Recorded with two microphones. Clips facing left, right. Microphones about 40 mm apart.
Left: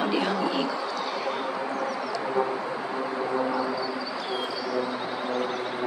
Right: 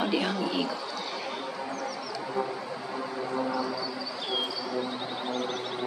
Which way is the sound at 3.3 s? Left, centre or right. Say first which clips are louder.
Left 2 dB; left.